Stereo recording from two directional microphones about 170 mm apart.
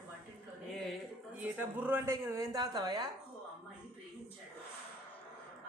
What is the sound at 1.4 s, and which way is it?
A woman's voice, 10° right (ahead or behind).